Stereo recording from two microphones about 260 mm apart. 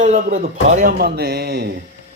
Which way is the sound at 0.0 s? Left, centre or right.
Right.